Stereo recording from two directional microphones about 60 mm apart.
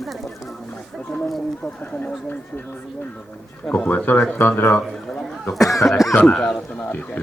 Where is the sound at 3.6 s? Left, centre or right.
Left.